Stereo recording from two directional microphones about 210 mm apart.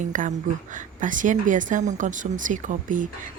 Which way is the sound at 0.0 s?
35° right (ahead or behind).